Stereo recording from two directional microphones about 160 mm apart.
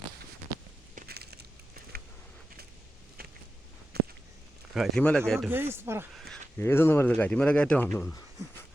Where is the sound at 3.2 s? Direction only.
75° right (ahead or behind).